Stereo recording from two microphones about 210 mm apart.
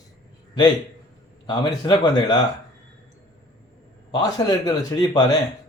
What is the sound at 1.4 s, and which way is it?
Speech, 20° left (ahead or behind).